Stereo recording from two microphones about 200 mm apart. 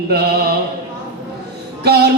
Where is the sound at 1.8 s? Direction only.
55° right (ahead or behind).